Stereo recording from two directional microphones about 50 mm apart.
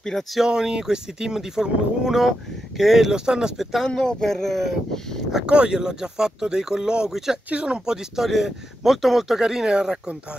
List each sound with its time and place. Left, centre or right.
0.0 s speech: centre
0.4 s speech: centre
3.8 s speech: centre
5.5 s speech: centre
7.4 s speech: right